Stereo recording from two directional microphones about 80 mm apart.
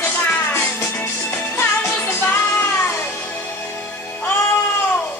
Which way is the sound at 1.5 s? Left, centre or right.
Left.